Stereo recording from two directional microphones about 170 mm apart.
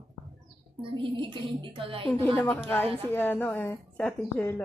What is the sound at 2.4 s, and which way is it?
A woman's voice, 10° left (ahead or behind).